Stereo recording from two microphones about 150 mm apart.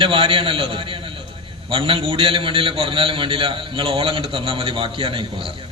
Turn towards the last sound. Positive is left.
turn(degrees=-35)  # may be behind; listen again after turning